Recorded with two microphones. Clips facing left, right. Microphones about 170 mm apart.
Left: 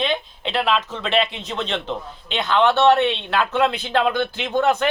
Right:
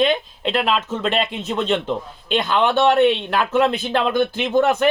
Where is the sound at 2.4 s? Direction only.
10° right (ahead or behind).